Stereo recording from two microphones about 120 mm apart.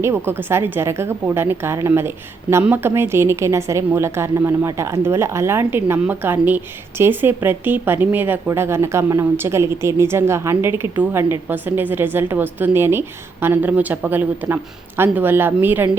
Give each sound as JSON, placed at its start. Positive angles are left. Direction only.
{"t": 0.3, "sound": "a woman's voice", "side_deg": -20}